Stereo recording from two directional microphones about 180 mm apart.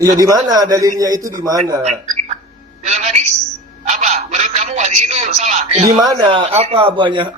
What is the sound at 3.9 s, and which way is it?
Telephone, 40° right (ahead or behind).